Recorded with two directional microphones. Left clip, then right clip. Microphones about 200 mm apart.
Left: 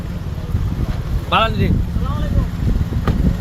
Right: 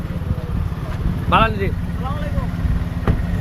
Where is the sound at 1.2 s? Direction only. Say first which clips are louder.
Even; 5° left (ahead or behind).